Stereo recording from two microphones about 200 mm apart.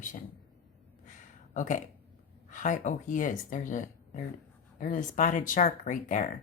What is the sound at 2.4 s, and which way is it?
Speech, 40° left (ahead or behind).